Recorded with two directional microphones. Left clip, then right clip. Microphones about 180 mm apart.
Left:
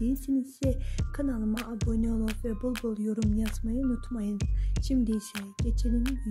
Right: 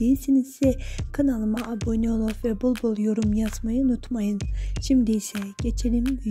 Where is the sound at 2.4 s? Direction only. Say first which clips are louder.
Right 8 dB; 30° right (ahead or behind).